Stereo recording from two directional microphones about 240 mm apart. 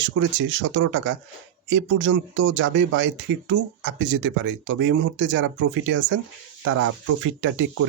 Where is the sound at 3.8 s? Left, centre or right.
Right.